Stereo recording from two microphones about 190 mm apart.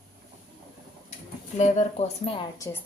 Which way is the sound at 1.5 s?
35° left (ahead or behind).